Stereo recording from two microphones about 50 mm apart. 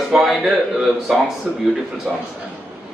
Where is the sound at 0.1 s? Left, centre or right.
Centre.